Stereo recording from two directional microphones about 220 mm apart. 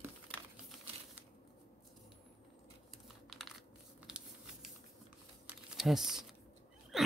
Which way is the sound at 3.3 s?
Centre (ahead or behind).